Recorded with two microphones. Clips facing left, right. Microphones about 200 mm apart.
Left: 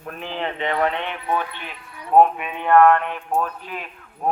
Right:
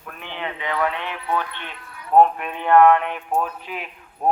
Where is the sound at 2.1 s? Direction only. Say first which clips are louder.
Even; 5° left (ahead or behind).